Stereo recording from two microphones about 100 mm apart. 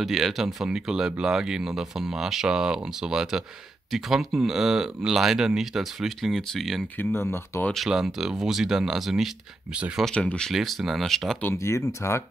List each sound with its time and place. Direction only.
0.0 s speech: centre (ahead or behind)
7.0 s speech: 25° left (ahead or behind)
7.7 s speech: centre (ahead or behind)
9.8 s speech: 10° right (ahead or behind)
10.0 s speech: 10° left (ahead or behind)
10.5 s speech: centre (ahead or behind)
11.5 s speech: 30° left (ahead or behind)